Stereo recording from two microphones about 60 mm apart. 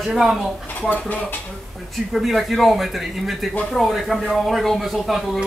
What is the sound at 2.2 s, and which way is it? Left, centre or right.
Speech, centre.